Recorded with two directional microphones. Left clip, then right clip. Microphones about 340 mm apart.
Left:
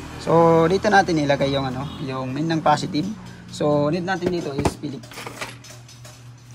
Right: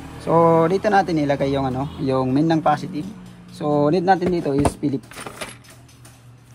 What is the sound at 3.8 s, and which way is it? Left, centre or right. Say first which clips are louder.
Speech: right 5 dB; centre.